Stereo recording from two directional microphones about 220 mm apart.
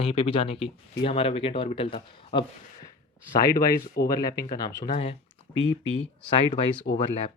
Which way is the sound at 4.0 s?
15° left (ahead or behind).